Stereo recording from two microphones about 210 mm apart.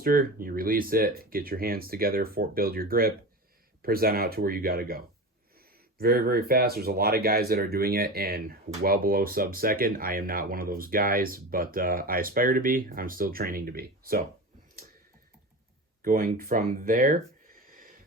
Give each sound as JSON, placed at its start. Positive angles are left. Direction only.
{"t": 0.0, "sound": "speech", "side_deg": -40}
{"t": 16.0, "sound": "speech", "side_deg": -40}